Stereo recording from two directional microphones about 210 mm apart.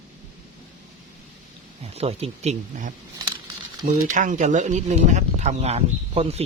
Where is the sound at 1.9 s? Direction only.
30° right (ahead or behind).